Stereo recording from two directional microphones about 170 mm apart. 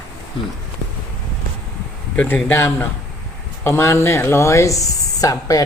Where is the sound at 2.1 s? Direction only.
10° left (ahead or behind).